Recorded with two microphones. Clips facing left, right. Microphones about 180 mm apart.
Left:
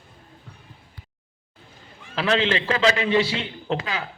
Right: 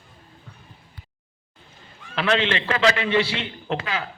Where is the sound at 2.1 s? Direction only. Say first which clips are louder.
Even; 35° left (ahead or behind).